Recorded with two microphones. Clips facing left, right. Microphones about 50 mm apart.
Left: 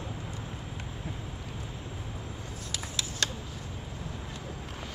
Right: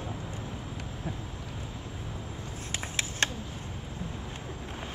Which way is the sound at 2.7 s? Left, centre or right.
Right.